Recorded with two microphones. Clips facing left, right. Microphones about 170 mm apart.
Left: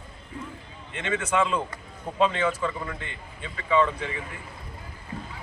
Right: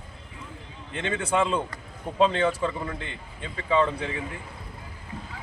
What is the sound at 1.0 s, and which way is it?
Speech, 35° right (ahead or behind).